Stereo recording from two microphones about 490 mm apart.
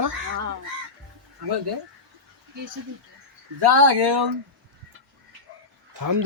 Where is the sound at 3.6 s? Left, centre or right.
Right.